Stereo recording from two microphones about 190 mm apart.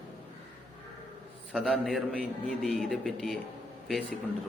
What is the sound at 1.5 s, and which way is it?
A man's voice, centre (ahead or behind).